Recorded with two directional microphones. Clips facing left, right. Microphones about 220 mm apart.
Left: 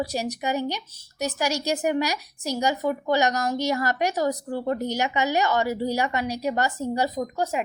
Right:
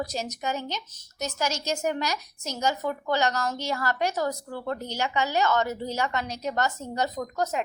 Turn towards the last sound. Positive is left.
turn(degrees=10)  # may be behind; listen again after turning